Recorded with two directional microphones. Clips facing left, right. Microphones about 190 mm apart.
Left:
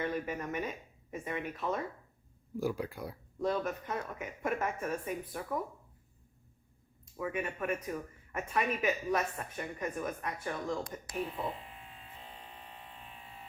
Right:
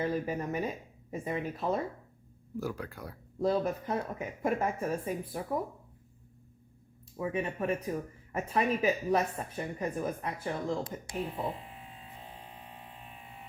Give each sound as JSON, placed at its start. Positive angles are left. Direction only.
{"t": 0.0, "sound": "speech", "side_deg": -30}
{"t": 2.6, "sound": "speech", "side_deg": 10}
{"t": 3.4, "sound": "speech", "side_deg": -30}
{"t": 7.2, "sound": "speech", "side_deg": -30}
{"t": 12.3, "sound": "a sound", "side_deg": -25}